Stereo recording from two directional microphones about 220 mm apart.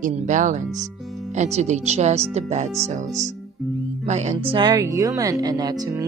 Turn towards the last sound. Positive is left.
turn(degrees=-15)  # may be behind; listen again after turning